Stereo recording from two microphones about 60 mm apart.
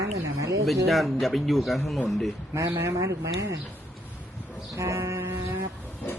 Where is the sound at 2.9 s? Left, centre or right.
Right.